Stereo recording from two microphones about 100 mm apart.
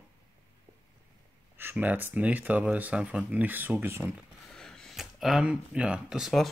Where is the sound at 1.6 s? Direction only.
20° right (ahead or behind).